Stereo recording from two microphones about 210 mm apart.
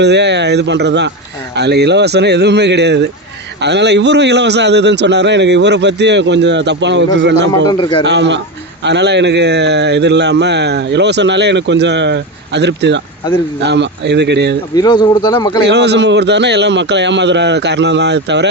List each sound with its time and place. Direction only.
0.0 s speech: 55° right (ahead or behind)
7.7 s speech: 20° left (ahead or behind)
8.0 s speech: 55° right (ahead or behind)
14.8 s speech: 20° left (ahead or behind)
15.6 s speech: 55° right (ahead or behind)